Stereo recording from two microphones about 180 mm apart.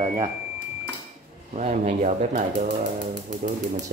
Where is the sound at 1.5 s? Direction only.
40° right (ahead or behind).